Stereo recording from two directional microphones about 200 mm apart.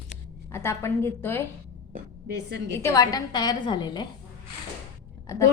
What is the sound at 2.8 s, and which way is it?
A woman's voice, 15° left (ahead or behind).